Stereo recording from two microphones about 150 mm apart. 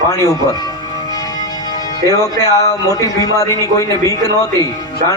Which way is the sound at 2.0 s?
20° left (ahead or behind).